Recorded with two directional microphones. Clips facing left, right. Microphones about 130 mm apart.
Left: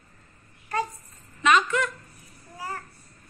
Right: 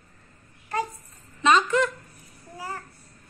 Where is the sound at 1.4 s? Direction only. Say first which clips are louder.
Right 2 dB; 30° right (ahead or behind).